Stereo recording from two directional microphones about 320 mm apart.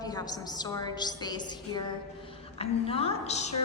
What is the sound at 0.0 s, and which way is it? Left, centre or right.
A woman's voice, centre.